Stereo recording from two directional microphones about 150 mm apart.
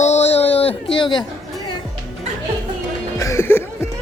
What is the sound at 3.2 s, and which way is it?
Music, 20° left (ahead or behind).